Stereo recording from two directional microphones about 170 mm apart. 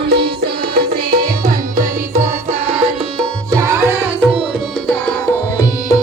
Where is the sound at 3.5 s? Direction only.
20° right (ahead or behind).